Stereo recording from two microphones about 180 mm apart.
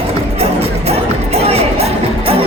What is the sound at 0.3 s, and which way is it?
Music, 35° right (ahead or behind).